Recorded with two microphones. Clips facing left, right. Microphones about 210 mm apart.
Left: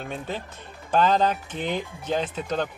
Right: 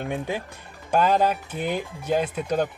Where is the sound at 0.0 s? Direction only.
15° right (ahead or behind).